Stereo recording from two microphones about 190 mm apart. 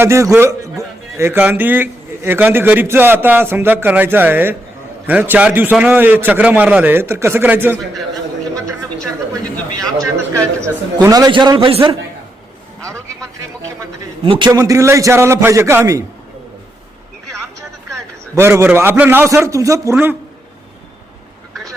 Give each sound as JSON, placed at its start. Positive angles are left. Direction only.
{"t": 0.0, "sound": "a man's voice", "side_deg": -15}
{"t": 10.0, "sound": "a man's voice", "side_deg": -15}
{"t": 14.3, "sound": "a man's voice", "side_deg": -25}
{"t": 18.3, "sound": "a man's voice", "side_deg": -15}